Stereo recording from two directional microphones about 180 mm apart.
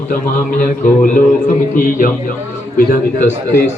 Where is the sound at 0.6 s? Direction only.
50° left (ahead or behind).